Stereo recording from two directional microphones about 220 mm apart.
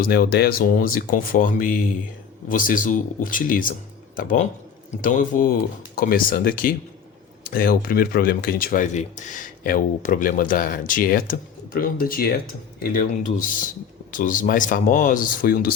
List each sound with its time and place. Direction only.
0.0 s speech: 45° left (ahead or behind)